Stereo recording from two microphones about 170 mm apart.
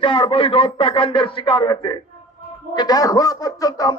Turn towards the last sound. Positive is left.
turn(degrees=20)  # may be behind; listen again after turning